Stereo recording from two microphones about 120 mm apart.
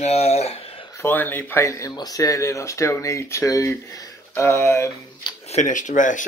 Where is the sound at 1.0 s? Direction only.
15° left (ahead or behind).